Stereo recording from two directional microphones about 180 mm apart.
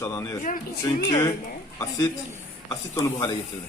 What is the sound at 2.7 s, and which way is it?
Speech, 20° left (ahead or behind).